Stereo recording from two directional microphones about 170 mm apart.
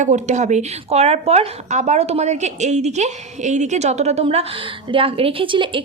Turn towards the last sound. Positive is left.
turn(degrees=-30)  # may be behind; listen again after turning